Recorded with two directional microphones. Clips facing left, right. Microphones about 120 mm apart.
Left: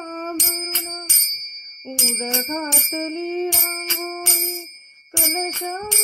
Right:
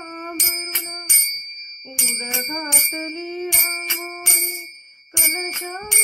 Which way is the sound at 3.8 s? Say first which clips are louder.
Left 4 dB; 20° left (ahead or behind).